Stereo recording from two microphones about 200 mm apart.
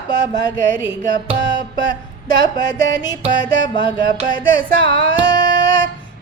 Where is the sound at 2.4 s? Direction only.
20° left (ahead or behind).